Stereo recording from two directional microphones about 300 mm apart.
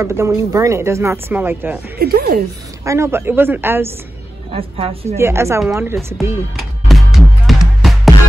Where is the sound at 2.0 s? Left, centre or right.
Right.